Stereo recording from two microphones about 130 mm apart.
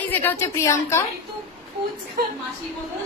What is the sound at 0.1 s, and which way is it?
Speech, 15° left (ahead or behind).